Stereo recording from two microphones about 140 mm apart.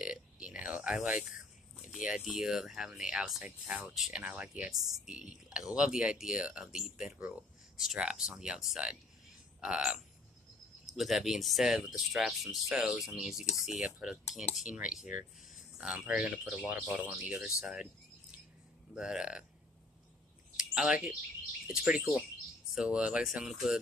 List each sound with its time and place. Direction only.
0.0 s burping: 5° right (ahead or behind)
1.9 s speech: 5° right (ahead or behind)
18.9 s speech: 5° right (ahead or behind)
20.5 s a sound: 5° right (ahead or behind)
21.6 s speech: 5° right (ahead or behind)